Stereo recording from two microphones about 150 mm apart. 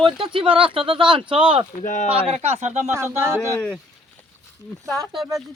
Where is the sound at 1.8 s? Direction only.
55° left (ahead or behind).